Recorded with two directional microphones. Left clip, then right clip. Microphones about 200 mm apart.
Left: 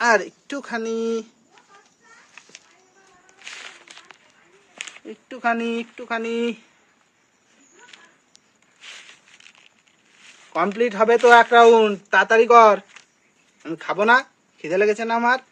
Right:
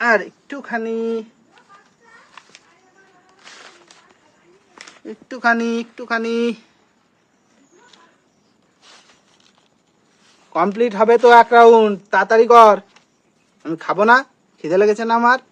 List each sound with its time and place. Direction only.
0.0 s speech: 15° left (ahead or behind)
5.0 s speech: 5° left (ahead or behind)
10.5 s speech: centre (ahead or behind)
13.6 s speech: 10° right (ahead or behind)